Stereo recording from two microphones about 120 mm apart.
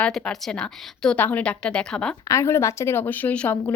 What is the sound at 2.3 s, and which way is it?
Speech, 20° left (ahead or behind).